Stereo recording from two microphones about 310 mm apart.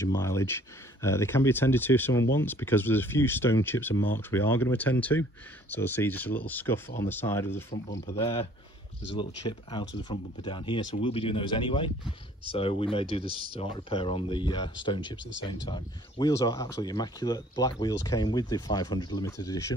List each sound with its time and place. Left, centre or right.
0.0 s speech: centre
8.1 s speech: centre